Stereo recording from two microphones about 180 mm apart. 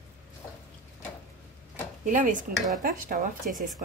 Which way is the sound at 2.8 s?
50° right (ahead or behind).